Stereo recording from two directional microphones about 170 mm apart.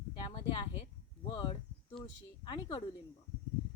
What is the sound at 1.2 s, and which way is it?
Speech, 30° left (ahead or behind).